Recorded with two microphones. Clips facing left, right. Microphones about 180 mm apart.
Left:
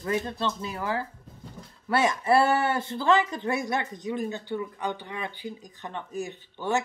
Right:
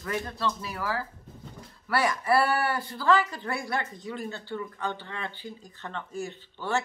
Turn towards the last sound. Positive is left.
turn(degrees=15)  # may be behind; listen again after turning